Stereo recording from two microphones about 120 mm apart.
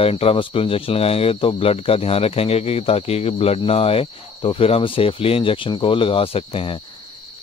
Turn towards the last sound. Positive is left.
turn(degrees=50)  # may be behind; listen again after turning